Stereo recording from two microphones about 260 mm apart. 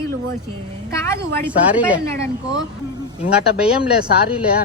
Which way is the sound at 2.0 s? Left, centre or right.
Centre.